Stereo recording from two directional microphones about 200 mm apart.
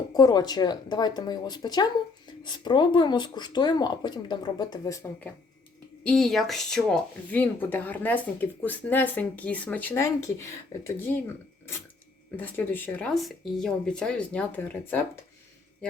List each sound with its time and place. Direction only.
0.1 s speech: 20° left (ahead or behind)
6.0 s speech: 5° left (ahead or behind)
12.4 s speech: 10° left (ahead or behind)